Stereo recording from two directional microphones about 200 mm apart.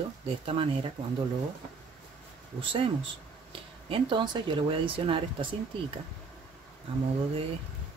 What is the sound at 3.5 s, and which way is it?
Speech, 25° right (ahead or behind).